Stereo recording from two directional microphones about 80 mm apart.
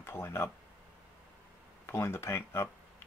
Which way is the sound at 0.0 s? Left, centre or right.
Left.